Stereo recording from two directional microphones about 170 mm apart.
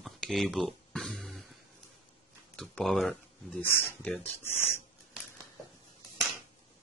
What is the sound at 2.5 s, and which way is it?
Speech, 5° left (ahead or behind).